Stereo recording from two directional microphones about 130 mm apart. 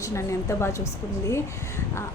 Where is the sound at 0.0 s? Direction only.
25° left (ahead or behind).